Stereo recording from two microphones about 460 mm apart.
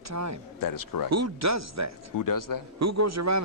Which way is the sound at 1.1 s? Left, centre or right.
Right.